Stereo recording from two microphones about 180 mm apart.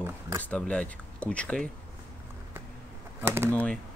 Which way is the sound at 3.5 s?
10° left (ahead or behind).